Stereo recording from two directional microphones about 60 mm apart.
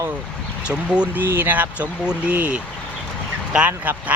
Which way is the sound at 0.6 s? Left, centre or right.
Centre.